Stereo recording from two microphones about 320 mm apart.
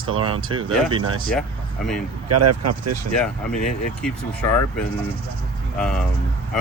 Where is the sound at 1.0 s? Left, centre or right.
Right.